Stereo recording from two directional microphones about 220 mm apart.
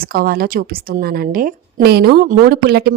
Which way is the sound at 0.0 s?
40° right (ahead or behind).